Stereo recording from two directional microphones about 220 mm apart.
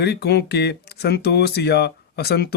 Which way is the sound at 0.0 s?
50° left (ahead or behind).